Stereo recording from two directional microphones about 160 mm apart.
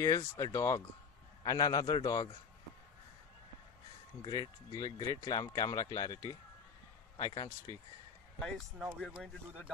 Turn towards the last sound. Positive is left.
turn(degrees=25)  # may be behind; listen again after turning